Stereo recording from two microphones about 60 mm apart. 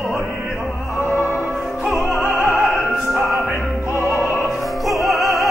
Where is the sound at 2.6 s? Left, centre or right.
Centre.